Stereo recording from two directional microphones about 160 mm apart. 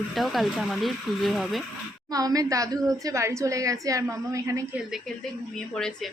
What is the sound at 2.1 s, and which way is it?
A woman's voice, 20° right (ahead or behind).